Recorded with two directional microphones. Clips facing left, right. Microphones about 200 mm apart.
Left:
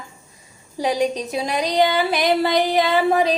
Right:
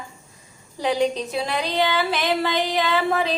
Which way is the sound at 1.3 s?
15° left (ahead or behind).